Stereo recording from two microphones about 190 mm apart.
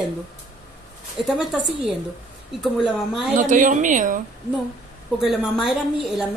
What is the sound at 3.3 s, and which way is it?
Speech, 45° right (ahead or behind).